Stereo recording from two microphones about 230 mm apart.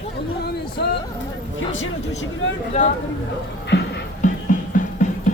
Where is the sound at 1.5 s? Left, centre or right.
Left.